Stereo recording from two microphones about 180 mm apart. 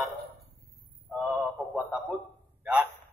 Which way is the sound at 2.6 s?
5° right (ahead or behind).